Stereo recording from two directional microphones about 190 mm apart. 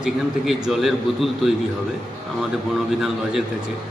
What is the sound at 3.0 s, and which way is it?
Speech, centre (ahead or behind).